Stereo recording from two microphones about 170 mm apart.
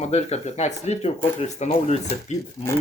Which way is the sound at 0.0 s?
40° left (ahead or behind).